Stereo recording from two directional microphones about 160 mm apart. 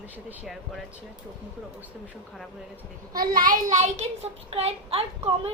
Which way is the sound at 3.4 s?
55° right (ahead or behind).